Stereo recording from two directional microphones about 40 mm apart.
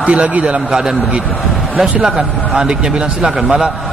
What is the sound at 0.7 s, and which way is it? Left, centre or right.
Speech, centre.